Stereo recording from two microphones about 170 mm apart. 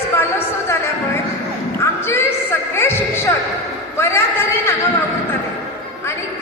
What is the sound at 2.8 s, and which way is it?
Music, 15° left (ahead or behind).